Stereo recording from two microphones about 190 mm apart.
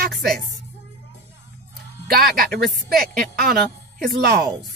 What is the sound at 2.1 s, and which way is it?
Speech, 55° right (ahead or behind).